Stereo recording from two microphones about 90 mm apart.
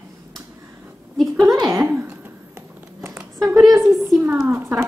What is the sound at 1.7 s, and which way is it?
Speech, 25° right (ahead or behind).